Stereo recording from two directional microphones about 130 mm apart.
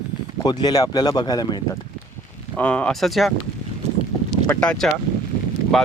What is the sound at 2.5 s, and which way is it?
Speech, 10° left (ahead or behind).